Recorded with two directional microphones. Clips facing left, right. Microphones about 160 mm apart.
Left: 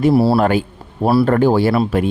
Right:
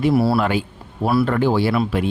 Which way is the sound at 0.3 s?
45° left (ahead or behind).